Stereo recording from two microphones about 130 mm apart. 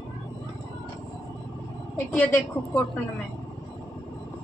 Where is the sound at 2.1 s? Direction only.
20° left (ahead or behind).